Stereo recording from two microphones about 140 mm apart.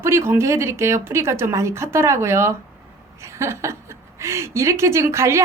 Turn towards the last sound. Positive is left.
turn(degrees=-20)  # may be behind; listen again after turning